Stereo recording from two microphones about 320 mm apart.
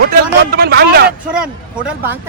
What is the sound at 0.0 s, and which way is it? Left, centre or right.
Speech, right.